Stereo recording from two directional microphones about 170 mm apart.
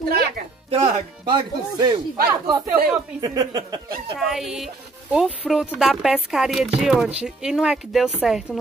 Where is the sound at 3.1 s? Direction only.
20° right (ahead or behind).